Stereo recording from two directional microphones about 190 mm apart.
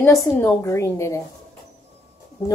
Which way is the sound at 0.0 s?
15° left (ahead or behind).